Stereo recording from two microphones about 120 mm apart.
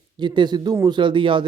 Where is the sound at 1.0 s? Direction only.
40° right (ahead or behind).